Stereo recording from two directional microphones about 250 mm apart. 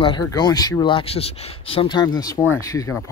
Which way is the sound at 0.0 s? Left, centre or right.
Centre.